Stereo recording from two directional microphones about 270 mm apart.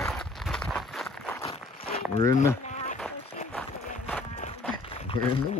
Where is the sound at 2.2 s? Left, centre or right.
Centre.